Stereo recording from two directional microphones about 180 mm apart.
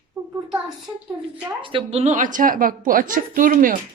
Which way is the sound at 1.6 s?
30° right (ahead or behind).